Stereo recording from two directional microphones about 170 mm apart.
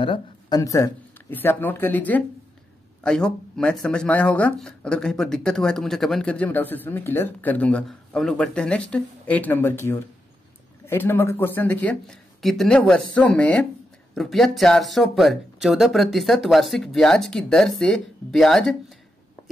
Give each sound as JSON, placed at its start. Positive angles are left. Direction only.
{"t": 0.0, "sound": "speech", "side_deg": 30}
{"t": 0.6, "sound": "speech", "side_deg": 20}